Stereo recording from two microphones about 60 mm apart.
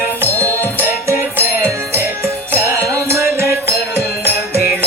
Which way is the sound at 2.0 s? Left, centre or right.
Right.